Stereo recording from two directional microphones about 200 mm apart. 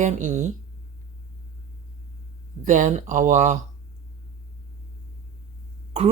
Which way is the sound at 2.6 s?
40° right (ahead or behind).